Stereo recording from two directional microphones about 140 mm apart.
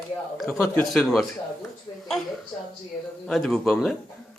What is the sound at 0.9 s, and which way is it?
Speech, centre (ahead or behind).